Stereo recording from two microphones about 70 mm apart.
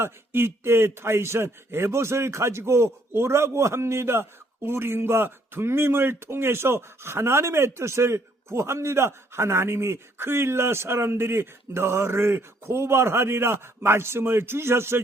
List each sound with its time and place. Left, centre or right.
0.0 s a man's voice: right